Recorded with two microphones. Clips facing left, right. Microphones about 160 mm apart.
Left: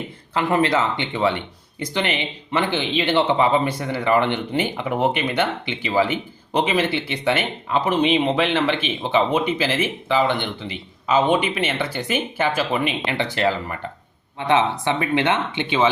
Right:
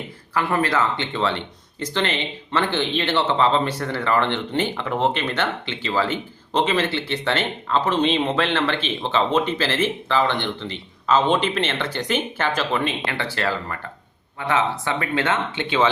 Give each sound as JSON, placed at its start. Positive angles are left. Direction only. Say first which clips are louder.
{"t": 0.3, "sound": "speech", "louder": "left 2 dB", "side_deg": 20}